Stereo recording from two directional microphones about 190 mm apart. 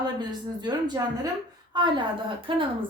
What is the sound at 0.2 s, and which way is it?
A woman's voice, 20° right (ahead or behind).